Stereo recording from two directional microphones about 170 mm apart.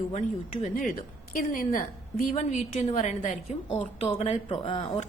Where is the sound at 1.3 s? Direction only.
55° left (ahead or behind).